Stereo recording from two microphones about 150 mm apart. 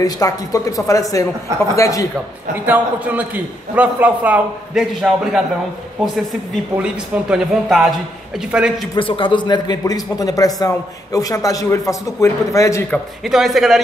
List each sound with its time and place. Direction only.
0.0 s speech: 25° left (ahead or behind)
2.5 s a man's voice: 10° right (ahead or behind)
6.5 s a man's voice: 5° right (ahead or behind)
8.9 s speech: 35° left (ahead or behind)
12.9 s speech: centre (ahead or behind)